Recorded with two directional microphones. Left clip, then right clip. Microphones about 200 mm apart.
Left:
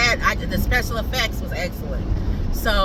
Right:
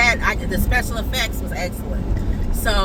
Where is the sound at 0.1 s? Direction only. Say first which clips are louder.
Right 1 dB; 15° left (ahead or behind).